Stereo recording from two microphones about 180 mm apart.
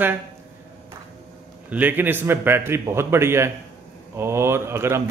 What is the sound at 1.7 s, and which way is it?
Speech, 10° right (ahead or behind).